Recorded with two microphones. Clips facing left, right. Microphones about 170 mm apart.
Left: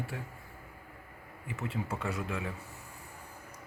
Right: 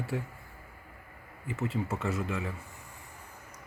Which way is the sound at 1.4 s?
Centre (ahead or behind).